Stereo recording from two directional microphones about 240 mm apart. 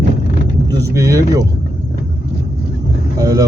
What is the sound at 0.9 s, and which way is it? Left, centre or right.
Speech, centre.